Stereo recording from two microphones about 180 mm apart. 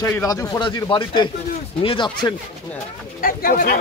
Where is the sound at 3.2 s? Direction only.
50° left (ahead or behind).